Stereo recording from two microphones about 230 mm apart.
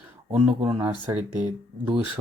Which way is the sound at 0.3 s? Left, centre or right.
Centre.